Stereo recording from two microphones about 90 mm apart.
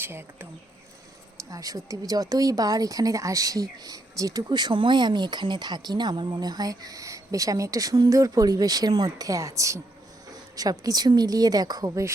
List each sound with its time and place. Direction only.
0.0 s speech: 25° right (ahead or behind)
1.5 s speech: 40° right (ahead or behind)